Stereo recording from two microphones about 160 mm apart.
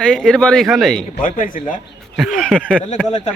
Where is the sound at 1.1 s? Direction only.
60° left (ahead or behind).